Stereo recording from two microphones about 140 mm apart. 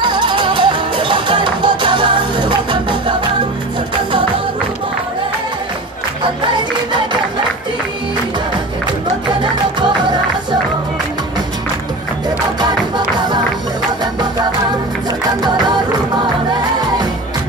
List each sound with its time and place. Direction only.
0.0 s music: 35° right (ahead or behind)
6.2 s music: 35° right (ahead or behind)
9.4 s music: 35° right (ahead or behind)
12.5 s music: 30° right (ahead or behind)